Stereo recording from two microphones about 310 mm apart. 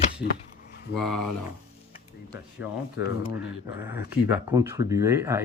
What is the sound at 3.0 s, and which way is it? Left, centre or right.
Speech, left.